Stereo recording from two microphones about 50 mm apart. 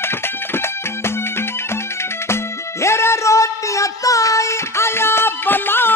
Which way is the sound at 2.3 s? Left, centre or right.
Left.